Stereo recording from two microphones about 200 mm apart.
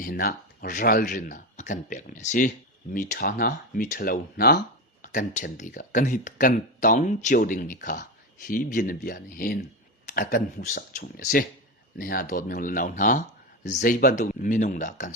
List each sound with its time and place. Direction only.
0.0 s speech: 45° left (ahead or behind)